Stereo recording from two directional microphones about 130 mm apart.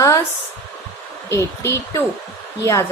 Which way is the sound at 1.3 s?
25° left (ahead or behind).